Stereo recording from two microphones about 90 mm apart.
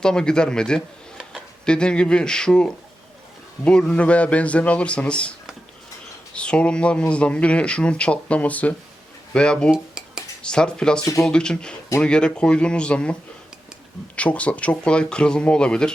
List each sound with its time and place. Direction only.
0.0 s speech: 10° left (ahead or behind)
6.3 s speech: 10° left (ahead or behind)
9.7 s cutlery: 5° right (ahead or behind)
10.4 s speech: 10° left (ahead or behind)
14.2 s speech: 15° left (ahead or behind)